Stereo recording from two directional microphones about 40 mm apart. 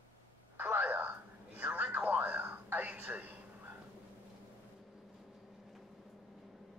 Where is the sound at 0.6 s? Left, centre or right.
Right.